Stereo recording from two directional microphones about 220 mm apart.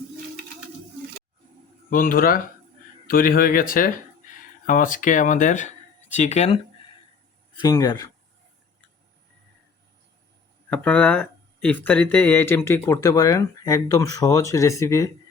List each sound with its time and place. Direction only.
1.9 s speech: 40° left (ahead or behind)
7.6 s speech: 15° left (ahead or behind)
10.7 s speech: 5° left (ahead or behind)